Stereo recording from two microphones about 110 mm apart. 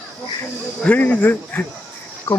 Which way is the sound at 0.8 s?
15° left (ahead or behind).